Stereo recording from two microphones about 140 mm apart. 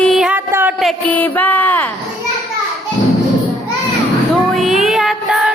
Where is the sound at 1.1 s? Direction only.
10° left (ahead or behind).